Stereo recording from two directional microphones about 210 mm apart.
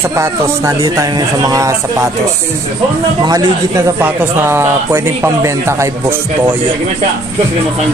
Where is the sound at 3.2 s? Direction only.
15° right (ahead or behind).